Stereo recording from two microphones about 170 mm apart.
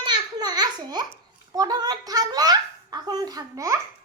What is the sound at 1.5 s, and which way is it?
Giggle, 20° right (ahead or behind).